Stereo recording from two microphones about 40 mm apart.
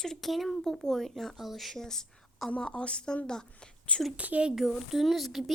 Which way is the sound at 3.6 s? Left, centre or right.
Left.